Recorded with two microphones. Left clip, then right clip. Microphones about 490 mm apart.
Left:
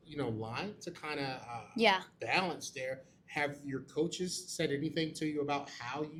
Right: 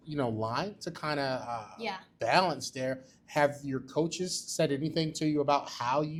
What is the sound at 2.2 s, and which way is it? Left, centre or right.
Speech, right.